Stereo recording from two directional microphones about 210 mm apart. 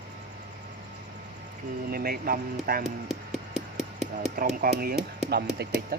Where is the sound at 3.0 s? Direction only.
Centre (ahead or behind).